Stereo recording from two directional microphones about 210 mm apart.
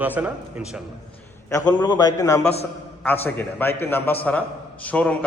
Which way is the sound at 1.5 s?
15° left (ahead or behind).